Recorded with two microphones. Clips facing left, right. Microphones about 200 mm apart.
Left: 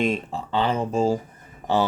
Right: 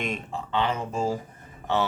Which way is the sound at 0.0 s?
30° left (ahead or behind).